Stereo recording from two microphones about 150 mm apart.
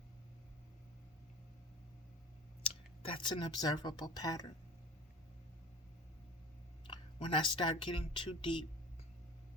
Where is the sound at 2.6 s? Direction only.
35° left (ahead or behind).